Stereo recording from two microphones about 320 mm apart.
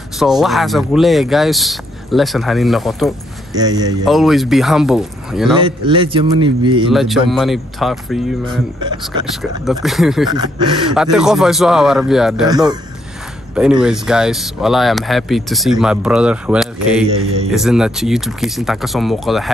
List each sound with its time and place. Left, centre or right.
0.2 s speech: centre
3.5 s a man's voice: centre
4.0 s speech: centre
5.6 s a man's voice: centre
6.9 s speech: centre
8.5 s a man's voice: centre
9.7 s speech: centre
10.3 s a man's voice: centre
11.0 s speech: centre
12.4 s a man's voice: centre